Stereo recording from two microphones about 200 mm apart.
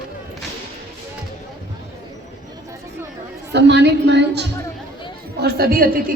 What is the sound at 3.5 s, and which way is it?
Speech, 60° right (ahead or behind).